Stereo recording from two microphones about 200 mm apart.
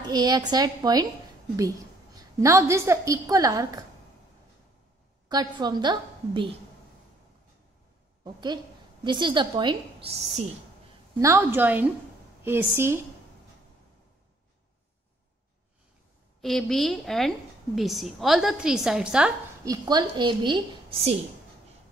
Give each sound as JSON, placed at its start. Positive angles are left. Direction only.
{"t": 0.0, "sound": "a woman's voice", "side_deg": -20}
{"t": 2.1, "sound": "a woman's voice", "side_deg": -15}
{"t": 5.3, "sound": "a woman's voice", "side_deg": -20}
{"t": 8.2, "sound": "a woman's voice", "side_deg": -20}
{"t": 11.1, "sound": "a woman's voice", "side_deg": -10}
{"t": 16.3, "sound": "a woman's voice", "side_deg": 0}
{"t": 19.6, "sound": "a woman's voice", "side_deg": -20}